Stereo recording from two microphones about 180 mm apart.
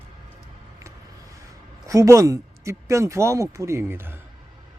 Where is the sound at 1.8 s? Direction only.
15° right (ahead or behind).